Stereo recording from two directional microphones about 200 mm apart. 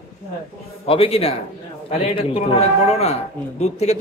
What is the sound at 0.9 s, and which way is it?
A man's voice, 30° left (ahead or behind).